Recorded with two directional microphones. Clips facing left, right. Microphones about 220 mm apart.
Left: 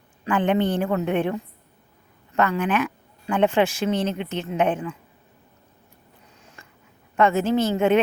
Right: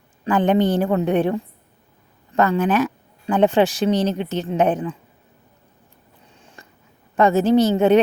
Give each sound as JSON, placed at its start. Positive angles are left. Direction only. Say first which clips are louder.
{"t": 0.3, "sound": "speech", "louder": "right 4 dB", "side_deg": -35}
{"t": 6.4, "sound": "a sound", "louder": "right 4 dB", "side_deg": -30}
{"t": 7.2, "sound": "speech", "louder": "right 5 dB", "side_deg": -35}